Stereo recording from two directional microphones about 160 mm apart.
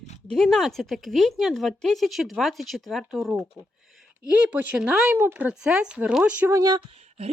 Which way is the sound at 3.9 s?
Centre (ahead or behind).